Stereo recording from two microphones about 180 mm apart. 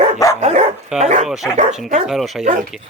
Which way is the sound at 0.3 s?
35° right (ahead or behind).